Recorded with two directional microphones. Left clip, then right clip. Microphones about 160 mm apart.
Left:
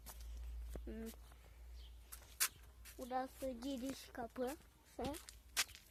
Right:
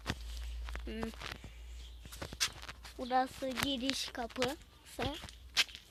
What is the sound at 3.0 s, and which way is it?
Speech, 25° right (ahead or behind).